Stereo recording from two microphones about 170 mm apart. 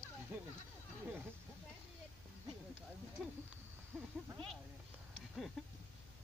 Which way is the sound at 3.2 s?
Centre (ahead or behind).